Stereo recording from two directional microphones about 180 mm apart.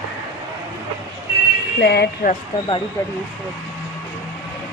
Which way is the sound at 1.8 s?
65° left (ahead or behind).